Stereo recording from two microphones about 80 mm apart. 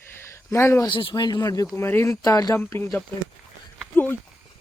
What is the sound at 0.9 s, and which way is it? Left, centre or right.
Speech, left.